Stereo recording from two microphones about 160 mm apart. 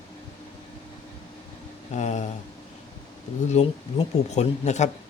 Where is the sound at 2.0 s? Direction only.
45° left (ahead or behind).